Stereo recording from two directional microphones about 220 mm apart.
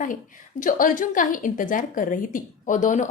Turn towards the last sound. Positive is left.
turn(degrees=35)  # may be behind; listen again after turning